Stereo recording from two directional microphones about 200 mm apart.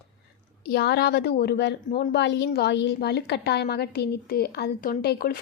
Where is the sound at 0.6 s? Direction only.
55° left (ahead or behind).